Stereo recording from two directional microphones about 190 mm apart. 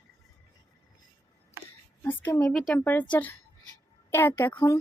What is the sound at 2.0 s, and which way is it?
Speech, 10° left (ahead or behind).